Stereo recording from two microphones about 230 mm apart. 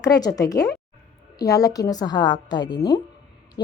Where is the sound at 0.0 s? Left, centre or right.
Centre.